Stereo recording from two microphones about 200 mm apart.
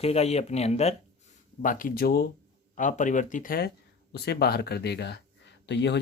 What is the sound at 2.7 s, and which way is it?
Speech, 40° left (ahead or behind).